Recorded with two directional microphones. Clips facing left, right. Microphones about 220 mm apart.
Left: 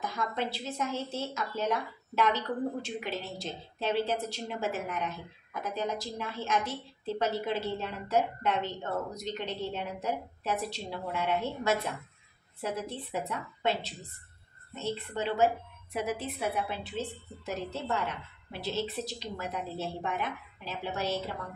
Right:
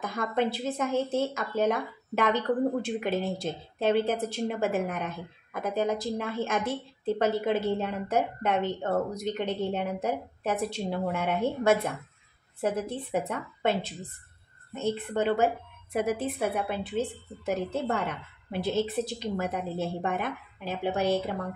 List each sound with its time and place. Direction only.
0.0 s a woman's voice: 55° right (ahead or behind)